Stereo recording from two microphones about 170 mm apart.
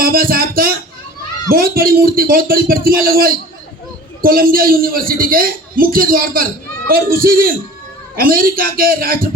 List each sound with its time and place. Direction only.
0.0 s a man's voice: 60° right (ahead or behind)